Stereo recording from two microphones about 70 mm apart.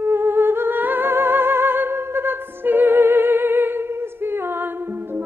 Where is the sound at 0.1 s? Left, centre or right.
Right.